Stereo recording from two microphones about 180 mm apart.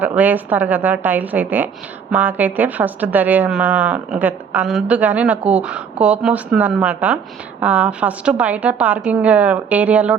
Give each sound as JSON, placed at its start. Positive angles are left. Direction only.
{"t": 0.0, "sound": "a woman's voice", "side_deg": -10}